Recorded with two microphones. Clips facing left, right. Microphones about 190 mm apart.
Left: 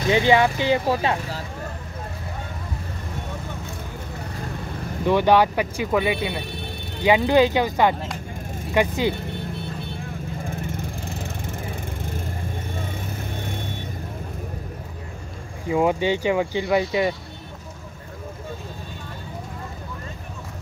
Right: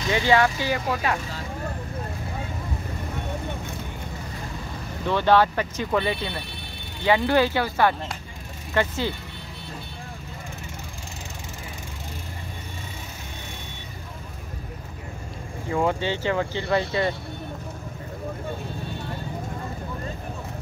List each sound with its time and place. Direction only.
0.1 s speech: 20° left (ahead or behind)
5.0 s speech: 15° left (ahead or behind)
15.7 s speech: 15° left (ahead or behind)